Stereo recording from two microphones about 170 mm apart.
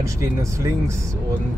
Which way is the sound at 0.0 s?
20° right (ahead or behind).